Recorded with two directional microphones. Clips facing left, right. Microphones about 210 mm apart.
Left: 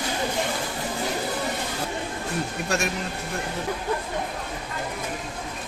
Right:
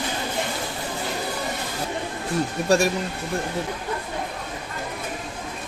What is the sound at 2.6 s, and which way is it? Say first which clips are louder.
Speech: right 9 dB; 35° right (ahead or behind).